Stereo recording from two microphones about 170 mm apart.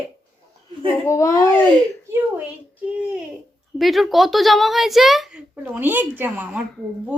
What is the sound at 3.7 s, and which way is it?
A woman's voice, centre (ahead or behind).